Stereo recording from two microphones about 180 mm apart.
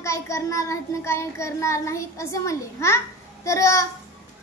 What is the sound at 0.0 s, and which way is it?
A child's voice, 15° left (ahead or behind).